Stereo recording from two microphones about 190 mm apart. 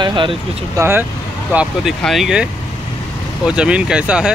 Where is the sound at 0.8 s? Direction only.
10° right (ahead or behind).